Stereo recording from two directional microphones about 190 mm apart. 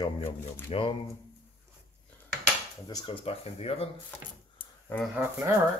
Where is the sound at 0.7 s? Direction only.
30° left (ahead or behind).